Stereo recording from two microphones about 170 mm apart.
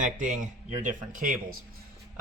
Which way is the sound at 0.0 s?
50° right (ahead or behind).